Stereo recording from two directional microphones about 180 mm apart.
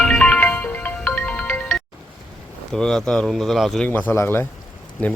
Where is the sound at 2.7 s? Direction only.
5° left (ahead or behind).